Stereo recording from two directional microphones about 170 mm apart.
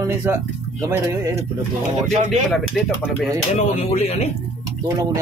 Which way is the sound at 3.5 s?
40° left (ahead or behind).